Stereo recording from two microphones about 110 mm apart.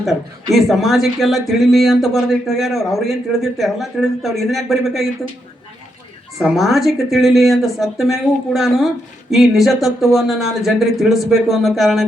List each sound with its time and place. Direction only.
0.5 s speech: centre (ahead or behind)
6.4 s speech: centre (ahead or behind)